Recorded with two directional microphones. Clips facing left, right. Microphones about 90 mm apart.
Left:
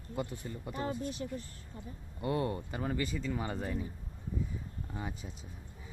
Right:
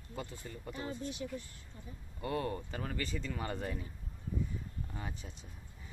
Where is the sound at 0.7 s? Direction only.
40° left (ahead or behind).